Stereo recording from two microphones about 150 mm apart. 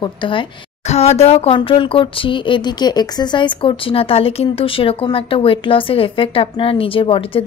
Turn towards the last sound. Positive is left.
turn(degrees=35)  # may be behind; listen again after turning